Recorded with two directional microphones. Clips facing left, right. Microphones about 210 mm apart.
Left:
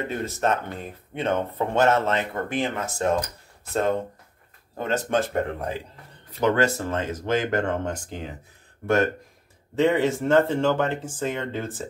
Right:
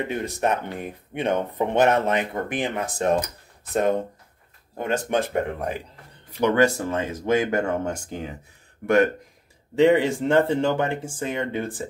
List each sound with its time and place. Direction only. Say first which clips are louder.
0.1 s speech: left 2 dB; 15° right (ahead or behind)
4.7 s speech: even; 15° right (ahead or behind)